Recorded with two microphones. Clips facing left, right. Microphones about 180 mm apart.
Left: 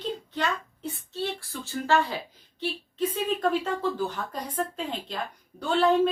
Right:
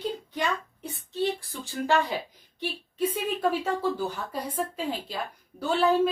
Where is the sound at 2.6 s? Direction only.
10° right (ahead or behind).